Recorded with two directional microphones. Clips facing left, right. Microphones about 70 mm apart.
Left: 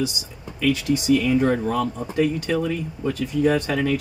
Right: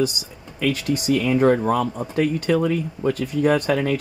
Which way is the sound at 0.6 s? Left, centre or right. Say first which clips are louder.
Left 1 dB; right.